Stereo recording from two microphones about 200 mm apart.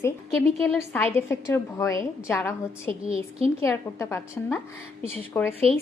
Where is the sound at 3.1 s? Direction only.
30° right (ahead or behind).